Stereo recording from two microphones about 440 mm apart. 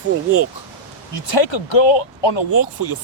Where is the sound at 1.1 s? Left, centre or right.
Left.